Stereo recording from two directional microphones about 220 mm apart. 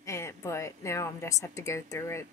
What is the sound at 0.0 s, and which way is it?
A woman's voice, 10° left (ahead or behind).